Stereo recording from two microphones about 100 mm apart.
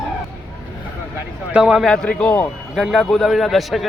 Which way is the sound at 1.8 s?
5° left (ahead or behind).